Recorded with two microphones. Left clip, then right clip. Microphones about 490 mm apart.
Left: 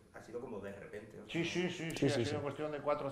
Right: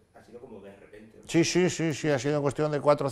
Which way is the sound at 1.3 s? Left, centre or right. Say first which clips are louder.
Right 13 dB; right.